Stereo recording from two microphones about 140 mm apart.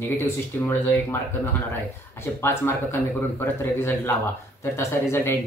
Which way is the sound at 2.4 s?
15° left (ahead or behind).